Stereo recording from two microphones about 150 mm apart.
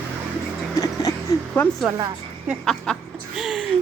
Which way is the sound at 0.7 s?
25° left (ahead or behind).